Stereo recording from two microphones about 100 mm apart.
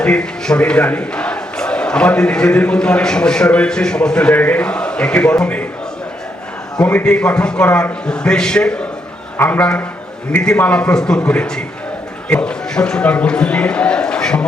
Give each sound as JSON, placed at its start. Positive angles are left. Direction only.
{"t": 0.0, "sound": "speech", "side_deg": 10}
{"t": 6.7, "sound": "speech", "side_deg": 10}